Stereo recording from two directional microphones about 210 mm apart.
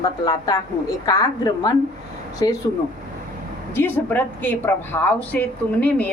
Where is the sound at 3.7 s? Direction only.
10° left (ahead or behind).